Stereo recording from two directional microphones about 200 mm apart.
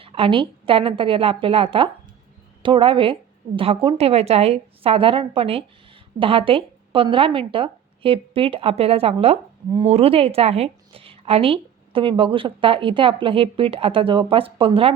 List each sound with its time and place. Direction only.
0.0 s speech: 25° right (ahead or behind)